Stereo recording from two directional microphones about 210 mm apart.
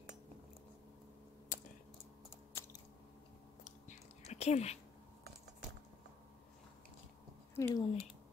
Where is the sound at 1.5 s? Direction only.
40° left (ahead or behind).